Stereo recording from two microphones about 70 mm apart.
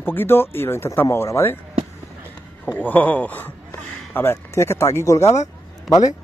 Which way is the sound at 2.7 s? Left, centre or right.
Left.